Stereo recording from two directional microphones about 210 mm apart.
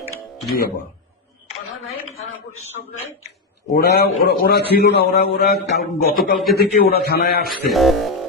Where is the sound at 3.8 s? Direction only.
50° left (ahead or behind).